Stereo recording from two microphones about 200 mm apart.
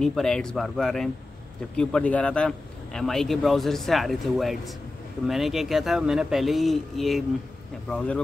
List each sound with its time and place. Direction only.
0.0 s speech: 5° left (ahead or behind)